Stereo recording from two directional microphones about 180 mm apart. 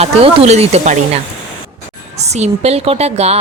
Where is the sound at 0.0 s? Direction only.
35° right (ahead or behind).